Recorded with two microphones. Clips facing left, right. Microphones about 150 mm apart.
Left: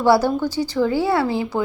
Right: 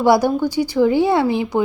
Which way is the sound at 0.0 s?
15° right (ahead or behind).